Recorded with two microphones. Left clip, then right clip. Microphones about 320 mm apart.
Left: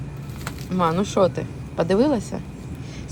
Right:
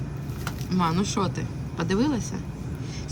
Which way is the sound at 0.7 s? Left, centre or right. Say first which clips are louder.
Left 5 dB; centre.